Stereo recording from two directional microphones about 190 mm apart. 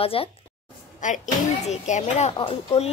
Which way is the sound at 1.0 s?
40° left (ahead or behind).